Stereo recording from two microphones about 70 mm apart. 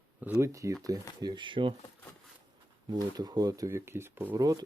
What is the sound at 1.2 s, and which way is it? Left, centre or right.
Speech, right.